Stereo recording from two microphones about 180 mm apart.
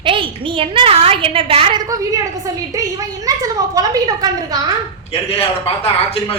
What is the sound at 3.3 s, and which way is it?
A woman's voice, 20° right (ahead or behind).